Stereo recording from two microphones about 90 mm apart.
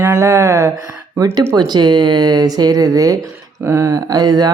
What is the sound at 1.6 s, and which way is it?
Speech, 55° right (ahead or behind).